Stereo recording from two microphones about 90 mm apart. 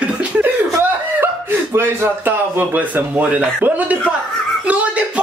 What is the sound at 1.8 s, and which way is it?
A man's voice, 25° right (ahead or behind).